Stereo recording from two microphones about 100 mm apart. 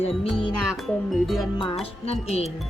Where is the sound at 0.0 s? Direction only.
70° left (ahead or behind).